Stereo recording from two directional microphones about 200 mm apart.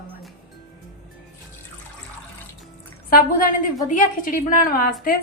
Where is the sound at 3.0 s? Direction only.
45° left (ahead or behind).